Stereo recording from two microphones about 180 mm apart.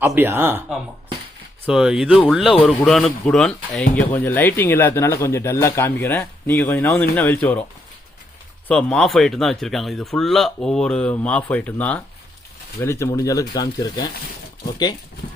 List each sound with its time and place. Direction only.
0.0 s speech: 10° right (ahead or behind); by 7.6 s 10° left (ahead or behind)
8.6 s speech: 5° left (ahead or behind); by 14.1 s 20° left (ahead or behind)